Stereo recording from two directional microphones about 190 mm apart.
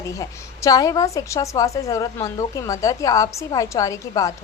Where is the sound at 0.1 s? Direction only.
15° left (ahead or behind).